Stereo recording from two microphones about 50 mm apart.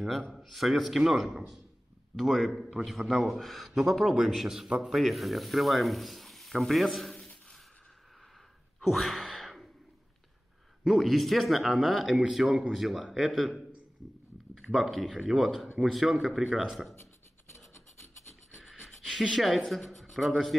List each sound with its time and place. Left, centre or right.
0.4 s a man's voice: centre
4.9 s speech: centre
8.8 s gasp: centre
10.9 s a man's voice: centre
17.5 s filing: left
19.3 s speech: centre